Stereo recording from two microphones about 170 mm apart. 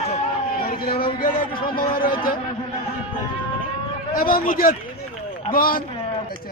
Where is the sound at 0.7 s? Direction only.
25° left (ahead or behind).